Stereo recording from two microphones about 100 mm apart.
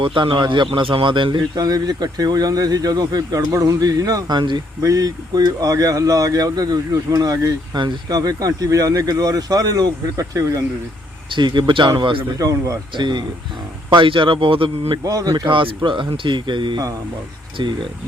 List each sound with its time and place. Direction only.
0.0 s speech: 60° right (ahead or behind)
4.8 s speech: 35° right (ahead or behind)
11.3 s speech: 50° right (ahead or behind)
12.4 s speech: 35° right (ahead or behind)
13.0 s speech: 50° right (ahead or behind)
15.0 s speech: 40° right (ahead or behind)
15.4 s speech: 60° right (ahead or behind)